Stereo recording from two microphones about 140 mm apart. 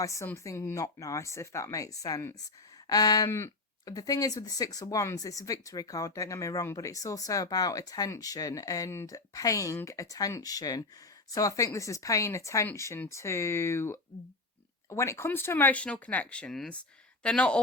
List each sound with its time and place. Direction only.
0.0 s speech: 20° left (ahead or behind)